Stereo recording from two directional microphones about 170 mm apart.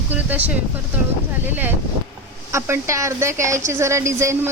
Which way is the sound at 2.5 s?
15° right (ahead or behind).